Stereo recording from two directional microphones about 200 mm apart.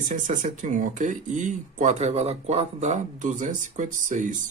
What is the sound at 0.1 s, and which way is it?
Speech, 40° right (ahead or behind).